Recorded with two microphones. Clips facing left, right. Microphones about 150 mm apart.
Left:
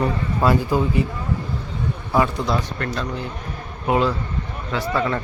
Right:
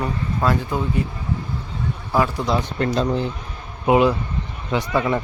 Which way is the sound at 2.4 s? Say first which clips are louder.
Right 2 dB; 20° right (ahead or behind).